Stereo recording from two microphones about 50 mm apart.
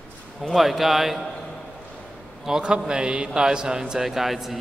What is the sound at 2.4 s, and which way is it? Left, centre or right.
A man's voice, centre.